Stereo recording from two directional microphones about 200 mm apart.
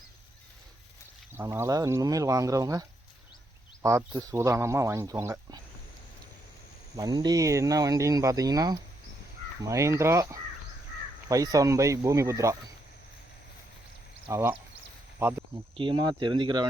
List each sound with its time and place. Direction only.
1.3 s speech: 10° right (ahead or behind)
3.8 s speech: 15° right (ahead or behind)
6.9 s speech: 20° right (ahead or behind)
14.3 s speech: 15° right (ahead or behind)
15.8 s speech: 25° right (ahead or behind)